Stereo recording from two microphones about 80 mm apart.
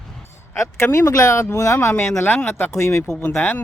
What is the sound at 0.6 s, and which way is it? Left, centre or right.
Speech, left.